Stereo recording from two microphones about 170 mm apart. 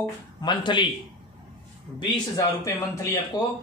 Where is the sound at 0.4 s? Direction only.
25° left (ahead or behind).